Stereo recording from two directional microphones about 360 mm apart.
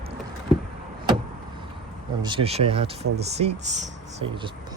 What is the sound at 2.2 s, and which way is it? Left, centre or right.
Speech, centre.